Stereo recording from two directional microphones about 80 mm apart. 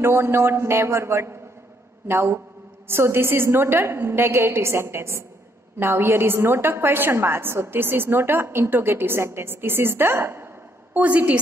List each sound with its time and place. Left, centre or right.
0.0 s a woman's voice: right